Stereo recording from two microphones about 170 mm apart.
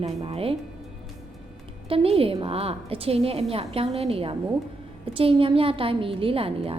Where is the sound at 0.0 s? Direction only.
35° right (ahead or behind).